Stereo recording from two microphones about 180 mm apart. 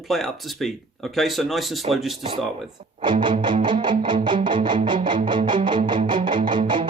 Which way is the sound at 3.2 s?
25° right (ahead or behind).